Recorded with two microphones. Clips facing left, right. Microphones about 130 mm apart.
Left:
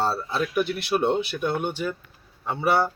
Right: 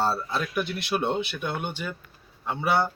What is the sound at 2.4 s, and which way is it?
Speech, 5° left (ahead or behind).